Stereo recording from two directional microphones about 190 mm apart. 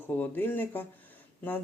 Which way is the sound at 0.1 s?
10° left (ahead or behind).